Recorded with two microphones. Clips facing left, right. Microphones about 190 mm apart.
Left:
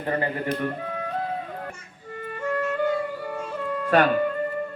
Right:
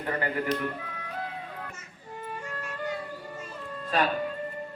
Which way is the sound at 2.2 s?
70° left (ahead or behind).